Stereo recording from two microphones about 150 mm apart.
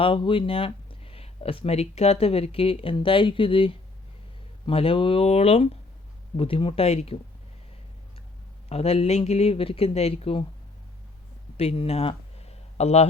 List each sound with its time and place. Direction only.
0.0 s speech: 35° left (ahead or behind)
8.7 s speech: 40° left (ahead or behind)
11.5 s a sound: 40° left (ahead or behind)